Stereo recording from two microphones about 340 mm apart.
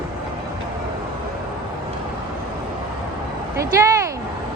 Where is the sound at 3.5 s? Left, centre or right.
Centre.